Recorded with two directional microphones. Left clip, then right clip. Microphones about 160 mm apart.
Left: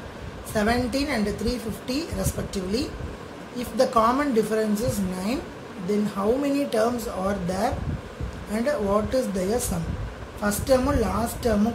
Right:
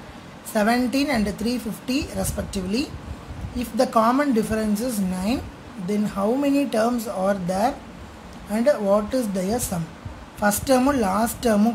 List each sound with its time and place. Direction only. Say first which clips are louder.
0.6 s a woman's voice: right 3 dB; 15° right (ahead or behind)